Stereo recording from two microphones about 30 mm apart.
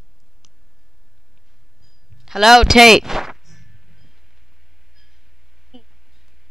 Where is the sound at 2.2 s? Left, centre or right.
Centre.